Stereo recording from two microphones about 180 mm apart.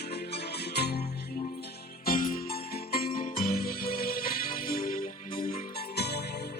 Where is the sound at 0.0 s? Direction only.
60° left (ahead or behind).